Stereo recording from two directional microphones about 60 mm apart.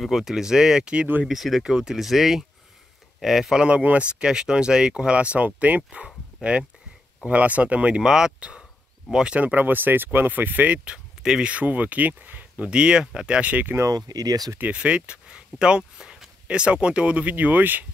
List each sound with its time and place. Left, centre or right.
0.0 s speech: centre
1.2 s speech: centre
3.6 s speech: right
8.0 s speech: centre
9.4 s speech: right
11.2 s speech: centre
11.5 s speech: right
12.6 s speech: centre
13.5 s speech: right
13.7 s speech: right
14.6 s speech: right